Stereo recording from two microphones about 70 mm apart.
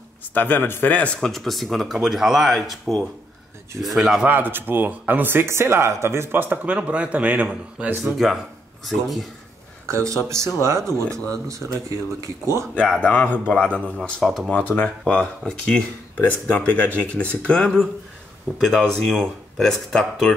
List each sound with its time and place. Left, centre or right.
0.3 s speech: left
0.9 s speech: centre
1.2 s speech: centre
4.3 s speech: right
8.0 s speech: centre
9.8 s speech: right
13.0 s speech: left
14.2 s speech: centre
14.5 s speech: left